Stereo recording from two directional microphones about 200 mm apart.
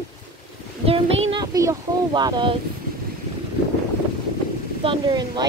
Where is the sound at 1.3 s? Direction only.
20° right (ahead or behind).